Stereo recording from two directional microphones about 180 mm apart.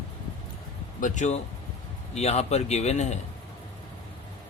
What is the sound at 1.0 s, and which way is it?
A man's voice, 40° left (ahead or behind).